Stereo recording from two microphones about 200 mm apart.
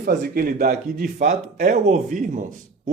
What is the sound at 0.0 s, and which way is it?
A man's voice, 45° right (ahead or behind).